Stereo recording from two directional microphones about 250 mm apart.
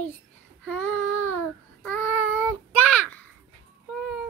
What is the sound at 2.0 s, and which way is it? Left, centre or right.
Child singing, left.